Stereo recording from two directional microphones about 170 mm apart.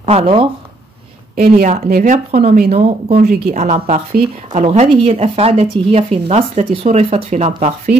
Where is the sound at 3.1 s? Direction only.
60° right (ahead or behind).